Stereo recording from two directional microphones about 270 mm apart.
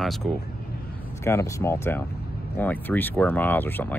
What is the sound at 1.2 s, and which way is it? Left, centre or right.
Speech, centre.